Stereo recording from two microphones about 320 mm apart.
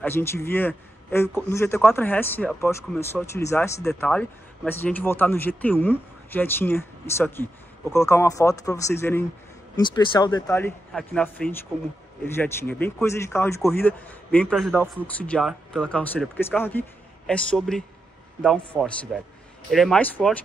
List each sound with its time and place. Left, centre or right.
0.0 s a man's voice: centre